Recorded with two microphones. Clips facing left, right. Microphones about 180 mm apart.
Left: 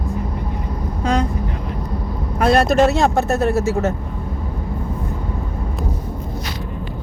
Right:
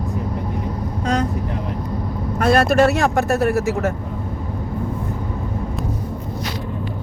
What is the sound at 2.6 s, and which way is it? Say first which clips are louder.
Speech: left 1 dB; 10° right (ahead or behind).